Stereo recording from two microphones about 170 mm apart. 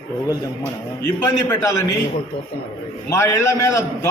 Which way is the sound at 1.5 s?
20° left (ahead or behind).